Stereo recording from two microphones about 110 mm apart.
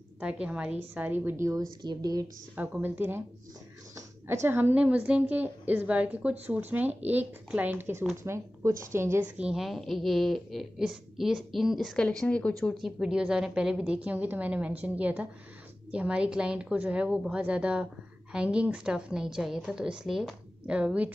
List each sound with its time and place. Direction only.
0.2 s a woman's voice: 10° right (ahead or behind); by 1.7 s 25° right (ahead or behind)
1.8 s speech: 40° right (ahead or behind)
2.5 s a woman's voice: 15° right (ahead or behind)
9.2 s a woman's voice: 10° right (ahead or behind)